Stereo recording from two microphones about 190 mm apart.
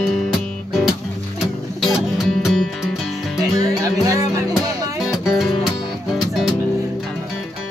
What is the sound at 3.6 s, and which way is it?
Music, 20° right (ahead or behind).